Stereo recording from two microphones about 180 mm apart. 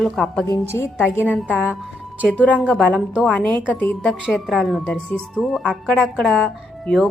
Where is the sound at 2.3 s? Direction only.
5° left (ahead or behind).